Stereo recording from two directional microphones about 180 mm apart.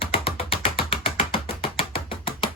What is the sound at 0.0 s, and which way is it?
Ratchet, 30° left (ahead or behind).